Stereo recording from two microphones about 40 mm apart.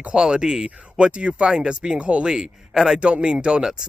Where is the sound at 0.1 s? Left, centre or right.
Centre.